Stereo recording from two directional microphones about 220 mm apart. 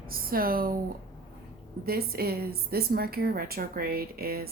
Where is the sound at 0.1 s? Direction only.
40° right (ahead or behind).